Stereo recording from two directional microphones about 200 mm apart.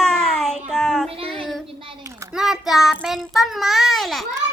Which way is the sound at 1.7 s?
25° right (ahead or behind).